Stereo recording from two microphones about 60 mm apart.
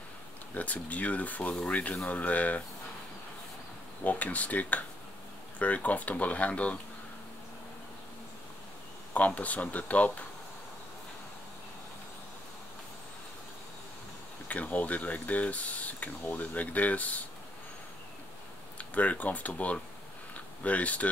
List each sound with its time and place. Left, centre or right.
0.6 s speech: left
4.0 s speech: left
9.1 s speech: left
14.5 s speech: left
18.8 s speech: left